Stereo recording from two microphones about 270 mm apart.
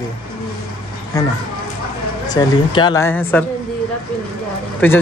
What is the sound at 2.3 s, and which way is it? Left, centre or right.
Speech, centre.